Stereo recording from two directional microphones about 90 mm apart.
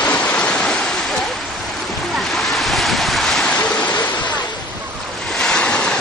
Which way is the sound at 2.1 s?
Centre (ahead or behind).